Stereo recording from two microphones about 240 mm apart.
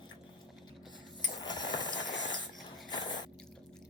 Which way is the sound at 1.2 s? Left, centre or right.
Centre.